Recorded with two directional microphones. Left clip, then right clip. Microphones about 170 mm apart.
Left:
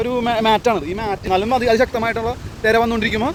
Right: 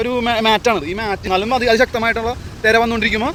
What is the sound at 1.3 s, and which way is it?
Speech, 15° left (ahead or behind).